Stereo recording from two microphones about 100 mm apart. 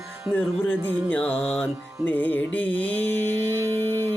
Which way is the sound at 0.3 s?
20° left (ahead or behind).